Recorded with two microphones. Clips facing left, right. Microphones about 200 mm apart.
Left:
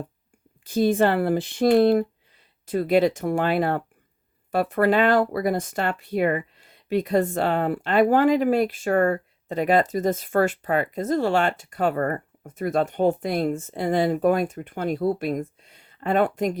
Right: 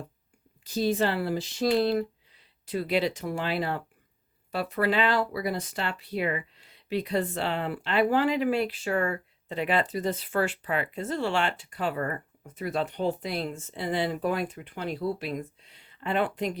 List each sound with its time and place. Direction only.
0.6 s speech: 55° left (ahead or behind)